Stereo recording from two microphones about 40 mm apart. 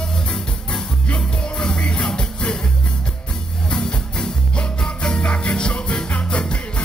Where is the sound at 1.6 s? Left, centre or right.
Left.